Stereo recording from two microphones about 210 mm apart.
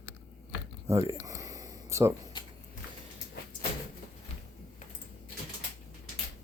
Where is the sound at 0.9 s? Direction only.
15° right (ahead or behind).